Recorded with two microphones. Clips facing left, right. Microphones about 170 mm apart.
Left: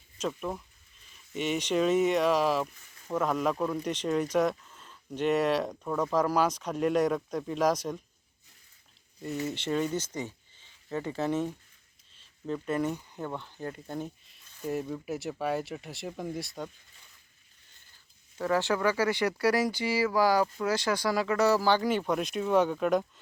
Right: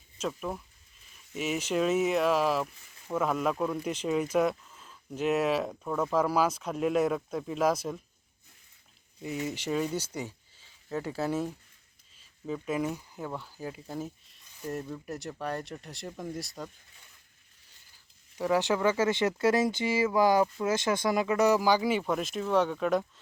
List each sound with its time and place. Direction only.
0.2 s speech: centre (ahead or behind)
9.2 s speech: 10° right (ahead or behind)
18.3 s speech: 15° right (ahead or behind); by 23.0 s centre (ahead or behind)